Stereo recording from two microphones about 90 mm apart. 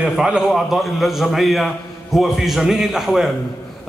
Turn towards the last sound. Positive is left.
turn(degrees=0)  # may be behind; listen again after turning